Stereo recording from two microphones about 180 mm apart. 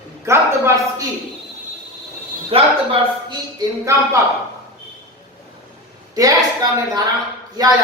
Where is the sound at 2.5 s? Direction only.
30° right (ahead or behind).